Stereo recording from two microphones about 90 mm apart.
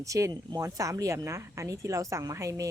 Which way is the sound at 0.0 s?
35° right (ahead or behind).